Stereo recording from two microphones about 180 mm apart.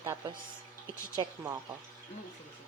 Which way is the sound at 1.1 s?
20° right (ahead or behind).